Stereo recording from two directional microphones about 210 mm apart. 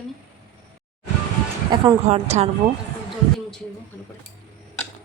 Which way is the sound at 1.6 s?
25° right (ahead or behind).